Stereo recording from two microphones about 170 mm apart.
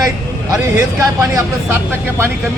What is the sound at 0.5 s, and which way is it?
A man's voice, 15° right (ahead or behind).